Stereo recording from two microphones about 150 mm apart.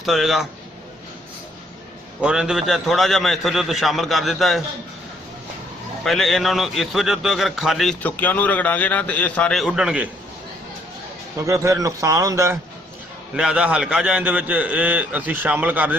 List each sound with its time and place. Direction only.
0.0 s a man's voice: centre (ahead or behind)
2.2 s a man's voice: 5° right (ahead or behind)
6.0 s a man's voice: centre (ahead or behind)
8.0 s a man's voice: 10° left (ahead or behind); by 10.0 s 5° right (ahead or behind)
11.4 s a man's voice: 20° right (ahead or behind)
13.4 s a man's voice: 5° right (ahead or behind)